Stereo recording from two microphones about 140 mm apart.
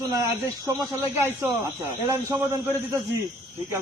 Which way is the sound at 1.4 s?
20° right (ahead or behind).